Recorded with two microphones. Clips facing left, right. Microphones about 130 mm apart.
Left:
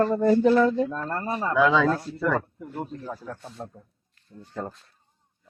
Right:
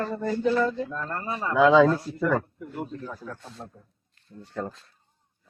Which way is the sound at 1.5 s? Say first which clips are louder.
Right 4 dB; 20° right (ahead or behind).